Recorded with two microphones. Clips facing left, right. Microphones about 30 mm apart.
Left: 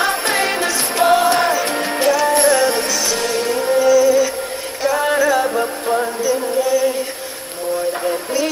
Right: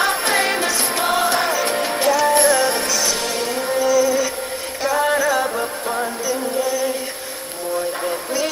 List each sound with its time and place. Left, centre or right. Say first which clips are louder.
0.0 s music: left 1 dB; left
3.9 s music: left 4 dB; centre
8.1 s a sound: left 3 dB; centre